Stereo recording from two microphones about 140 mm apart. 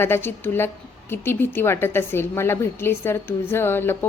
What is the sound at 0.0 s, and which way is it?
A woman's voice, 15° left (ahead or behind).